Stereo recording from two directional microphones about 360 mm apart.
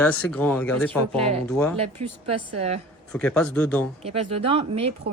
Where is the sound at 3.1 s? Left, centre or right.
Centre.